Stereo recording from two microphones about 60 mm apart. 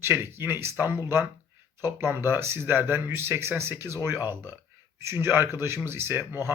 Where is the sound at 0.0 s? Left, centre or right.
Right.